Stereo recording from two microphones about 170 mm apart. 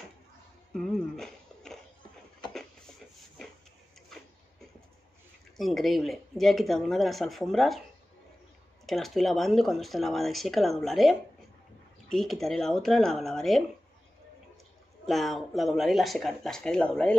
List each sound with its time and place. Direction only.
0.7 s a sound: centre (ahead or behind)
5.6 s speech: centre (ahead or behind)
8.8 s speech: centre (ahead or behind)
15.0 s speech: centre (ahead or behind)